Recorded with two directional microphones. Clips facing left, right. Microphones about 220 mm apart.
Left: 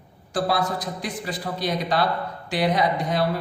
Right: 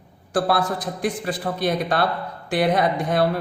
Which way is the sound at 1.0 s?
55° right (ahead or behind).